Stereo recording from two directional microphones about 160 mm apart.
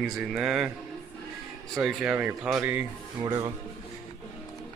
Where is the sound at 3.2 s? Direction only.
25° right (ahead or behind).